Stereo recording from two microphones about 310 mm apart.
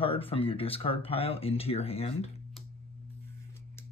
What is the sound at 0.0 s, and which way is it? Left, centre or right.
Speech, centre.